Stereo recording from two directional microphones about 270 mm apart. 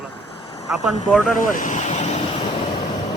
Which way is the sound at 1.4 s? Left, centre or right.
Left.